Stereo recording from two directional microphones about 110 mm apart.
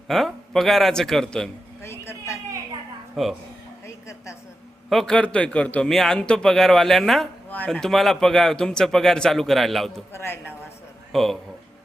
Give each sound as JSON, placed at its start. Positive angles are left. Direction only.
{"t": 0.1, "sound": "a man's voice", "side_deg": 0}
{"t": 1.8, "sound": "a sound", "side_deg": 25}
{"t": 3.2, "sound": "a man's voice", "side_deg": 0}
{"t": 4.9, "sound": "a man's voice", "side_deg": 5}
{"t": 10.1, "sound": "a woman's voice", "side_deg": 20}
{"t": 11.1, "sound": "speech", "side_deg": 5}